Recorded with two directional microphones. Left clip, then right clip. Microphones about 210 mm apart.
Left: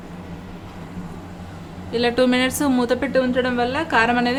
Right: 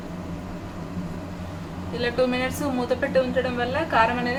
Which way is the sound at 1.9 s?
50° left (ahead or behind).